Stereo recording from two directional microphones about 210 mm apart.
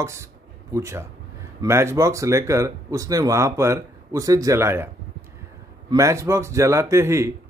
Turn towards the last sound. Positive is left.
turn(degrees=-15)  # may be behind; listen again after turning